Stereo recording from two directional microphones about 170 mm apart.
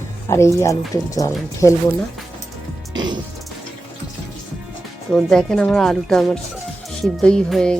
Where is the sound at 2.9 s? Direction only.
25° right (ahead or behind).